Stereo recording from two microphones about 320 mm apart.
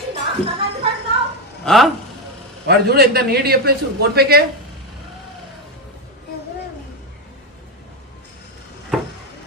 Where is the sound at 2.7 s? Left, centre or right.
Right.